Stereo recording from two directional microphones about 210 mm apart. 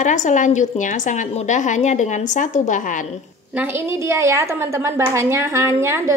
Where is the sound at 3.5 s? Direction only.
10° right (ahead or behind).